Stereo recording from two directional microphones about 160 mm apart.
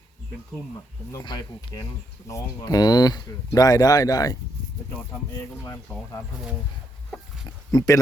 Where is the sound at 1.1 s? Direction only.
25° left (ahead or behind).